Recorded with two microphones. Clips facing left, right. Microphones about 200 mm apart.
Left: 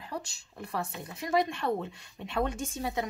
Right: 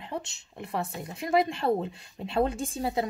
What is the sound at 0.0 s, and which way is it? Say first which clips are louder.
Speech: right 3 dB; 25° right (ahead or behind).